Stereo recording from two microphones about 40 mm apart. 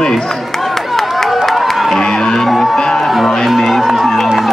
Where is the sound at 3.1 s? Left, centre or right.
Centre.